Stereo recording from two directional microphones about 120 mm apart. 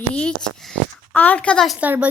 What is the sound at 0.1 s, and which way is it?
Speech, 10° left (ahead or behind).